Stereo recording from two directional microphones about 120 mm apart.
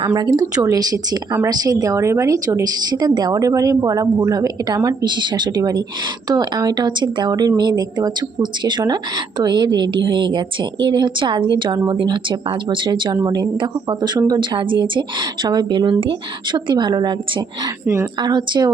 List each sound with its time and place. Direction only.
0.3 s speech: 30° right (ahead or behind)